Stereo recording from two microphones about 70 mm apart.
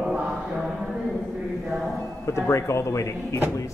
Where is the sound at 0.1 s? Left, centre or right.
Centre.